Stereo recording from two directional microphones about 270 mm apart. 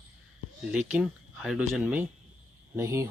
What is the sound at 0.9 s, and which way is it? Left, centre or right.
Speech, centre.